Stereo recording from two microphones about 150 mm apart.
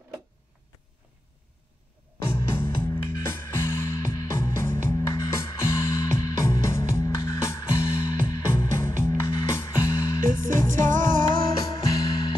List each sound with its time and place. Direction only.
2.2 s music: 15° left (ahead or behind)
10.9 s music: 60° right (ahead or behind)
12.0 s music: 30° left (ahead or behind)